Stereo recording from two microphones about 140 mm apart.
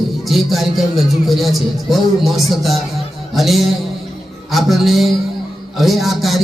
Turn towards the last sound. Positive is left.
turn(degrees=0)  # may be behind; listen again after turning